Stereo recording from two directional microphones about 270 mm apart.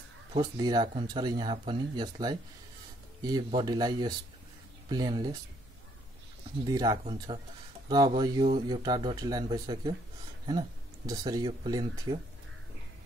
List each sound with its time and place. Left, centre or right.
0.3 s speech: centre
6.6 s speech: centre
11.1 s speech: centre